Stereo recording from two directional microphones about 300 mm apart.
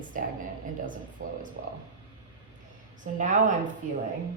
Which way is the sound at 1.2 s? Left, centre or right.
Right.